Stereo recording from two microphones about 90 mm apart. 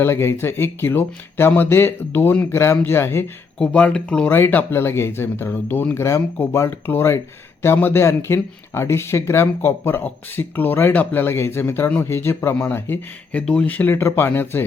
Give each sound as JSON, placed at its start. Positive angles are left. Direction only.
{"t": 0.0, "sound": "speech", "side_deg": 30}
{"t": 3.6, "sound": "speech", "side_deg": 15}
{"t": 4.3, "sound": "speech", "side_deg": 25}
{"t": 13.9, "sound": "speech", "side_deg": 30}